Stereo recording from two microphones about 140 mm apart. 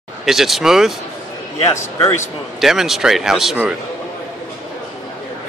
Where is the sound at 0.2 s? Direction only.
Centre (ahead or behind).